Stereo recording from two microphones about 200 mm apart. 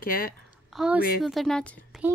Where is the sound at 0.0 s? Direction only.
45° left (ahead or behind).